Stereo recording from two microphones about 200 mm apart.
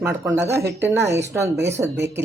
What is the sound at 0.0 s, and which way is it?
A woman's voice, 15° right (ahead or behind).